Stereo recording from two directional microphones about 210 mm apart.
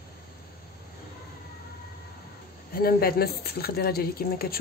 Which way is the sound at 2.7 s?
45° left (ahead or behind).